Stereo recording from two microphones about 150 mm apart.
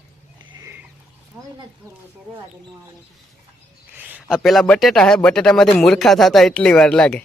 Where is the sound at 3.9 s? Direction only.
10° right (ahead or behind).